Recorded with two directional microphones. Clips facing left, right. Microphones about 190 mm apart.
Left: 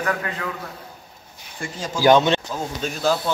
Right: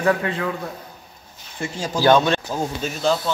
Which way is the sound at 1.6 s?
20° right (ahead or behind).